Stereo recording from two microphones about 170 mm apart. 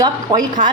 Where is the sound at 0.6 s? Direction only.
50° right (ahead or behind).